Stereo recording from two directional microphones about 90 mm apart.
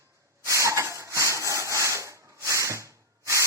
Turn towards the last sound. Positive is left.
turn(degrees=-35)  # may be behind; listen again after turning